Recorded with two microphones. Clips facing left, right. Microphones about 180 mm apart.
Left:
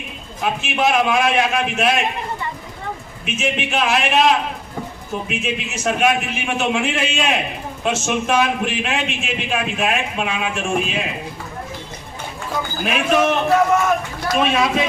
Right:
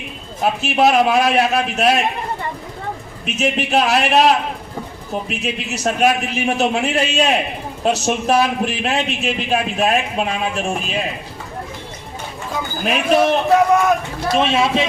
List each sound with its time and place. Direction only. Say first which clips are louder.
0.6 s a man's voice: right 4 dB; 40° right (ahead or behind)
3.2 s a man's voice: right 3 dB; 40° right (ahead or behind)
12.8 s a man's voice: right 2 dB; 35° right (ahead or behind)